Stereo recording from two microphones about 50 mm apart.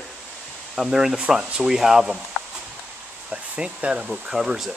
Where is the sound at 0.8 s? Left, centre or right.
Centre.